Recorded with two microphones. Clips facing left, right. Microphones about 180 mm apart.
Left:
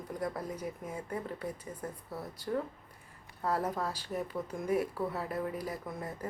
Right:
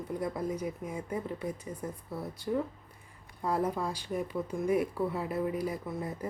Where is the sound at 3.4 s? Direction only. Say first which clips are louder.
Right 2 dB; 10° right (ahead or behind).